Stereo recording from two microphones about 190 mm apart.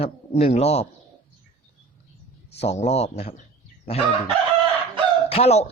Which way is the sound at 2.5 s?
35° left (ahead or behind).